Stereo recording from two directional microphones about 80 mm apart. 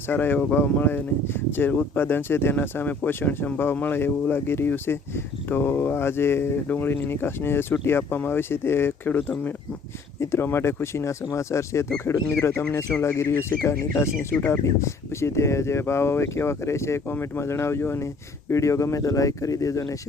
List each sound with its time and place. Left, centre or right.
0.1 s speech: left